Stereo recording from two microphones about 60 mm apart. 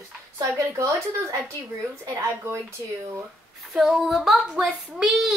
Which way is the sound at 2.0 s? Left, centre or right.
Right.